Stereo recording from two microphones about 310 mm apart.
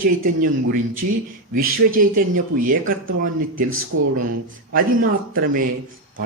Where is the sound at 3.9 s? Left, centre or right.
Right.